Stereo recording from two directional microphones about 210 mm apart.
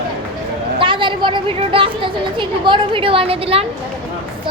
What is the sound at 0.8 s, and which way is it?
A woman's voice, 25° right (ahead or behind).